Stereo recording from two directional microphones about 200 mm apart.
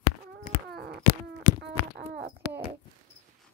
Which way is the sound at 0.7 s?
50° right (ahead or behind).